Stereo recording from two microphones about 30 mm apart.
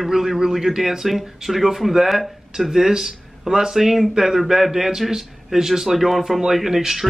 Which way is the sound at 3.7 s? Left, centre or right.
Centre.